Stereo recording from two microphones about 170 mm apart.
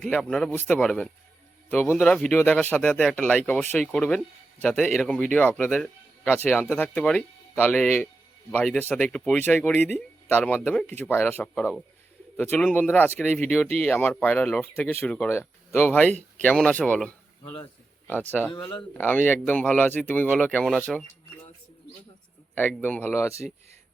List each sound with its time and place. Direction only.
0.0 s speech: 5° left (ahead or behind)
18.5 s speech: 25° left (ahead or behind)
18.9 s speech: 10° left (ahead or behind)
22.8 s speech: 10° left (ahead or behind)